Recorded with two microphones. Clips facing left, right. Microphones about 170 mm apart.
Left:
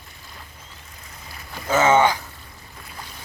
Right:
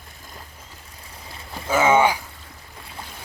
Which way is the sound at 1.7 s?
10° right (ahead or behind).